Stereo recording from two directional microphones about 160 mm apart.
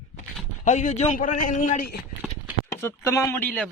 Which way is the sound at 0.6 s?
50° left (ahead or behind).